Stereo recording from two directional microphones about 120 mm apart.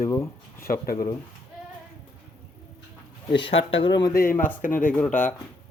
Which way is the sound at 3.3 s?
45° left (ahead or behind).